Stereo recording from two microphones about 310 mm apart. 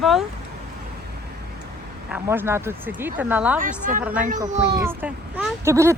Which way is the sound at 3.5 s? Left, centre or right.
Right.